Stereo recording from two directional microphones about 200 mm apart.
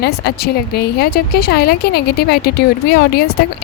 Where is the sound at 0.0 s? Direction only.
55° left (ahead or behind).